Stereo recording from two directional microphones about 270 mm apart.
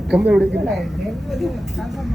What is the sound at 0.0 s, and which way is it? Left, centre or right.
Speech, centre.